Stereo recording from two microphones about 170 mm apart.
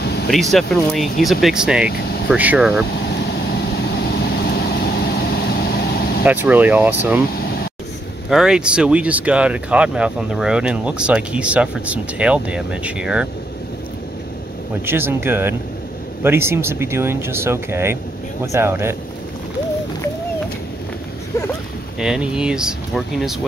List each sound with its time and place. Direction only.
0.0 s a sound: 70° left (ahead or behind)
0.3 s speech: centre (ahead or behind)
1.9 s speech: 65° left (ahead or behind)
2.2 s speech: 10° right (ahead or behind)
3.3 s vehicle: 70° left (ahead or behind)
6.2 s speech: 10° right (ahead or behind)
7.4 s a sound: 65° left (ahead or behind)
8.3 s speech: 5° right (ahead or behind)
14.9 s speech: 15° right (ahead or behind)
22.0 s speech: 5° right (ahead or behind)